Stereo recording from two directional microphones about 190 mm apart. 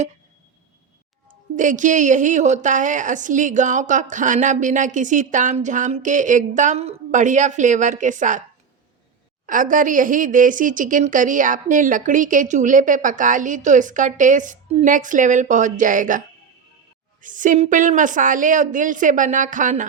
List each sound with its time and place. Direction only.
1.5 s a woman's voice: 40° right (ahead or behind)
9.5 s speech: 45° right (ahead or behind)